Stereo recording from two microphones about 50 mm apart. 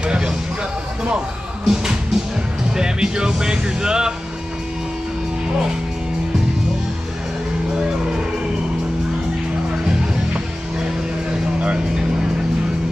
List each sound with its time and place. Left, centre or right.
0.0 s music: centre
1.7 s music: centre
2.7 s speech: centre
9.8 s music: centre